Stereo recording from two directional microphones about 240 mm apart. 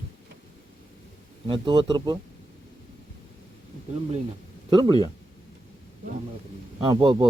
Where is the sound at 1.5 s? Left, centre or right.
Centre.